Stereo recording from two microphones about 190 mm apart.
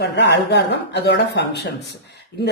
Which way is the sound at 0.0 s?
60° left (ahead or behind).